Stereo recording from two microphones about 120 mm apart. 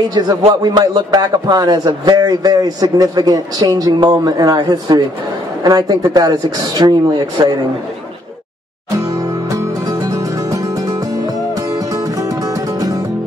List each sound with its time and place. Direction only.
0.6 s a man's voice: 35° right (ahead or behind)
8.9 s music: 30° right (ahead or behind)